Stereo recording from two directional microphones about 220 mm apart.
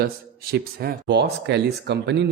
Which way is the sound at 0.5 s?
45° right (ahead or behind).